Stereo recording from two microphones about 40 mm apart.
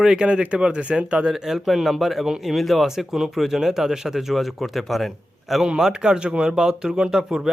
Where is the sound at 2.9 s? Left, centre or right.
Centre.